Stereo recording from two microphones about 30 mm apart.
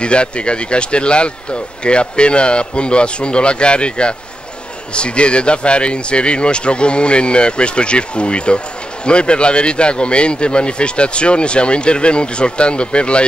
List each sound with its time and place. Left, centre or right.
0.0 s speech: left